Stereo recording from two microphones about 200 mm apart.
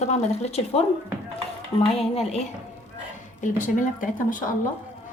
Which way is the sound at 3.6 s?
40° left (ahead or behind).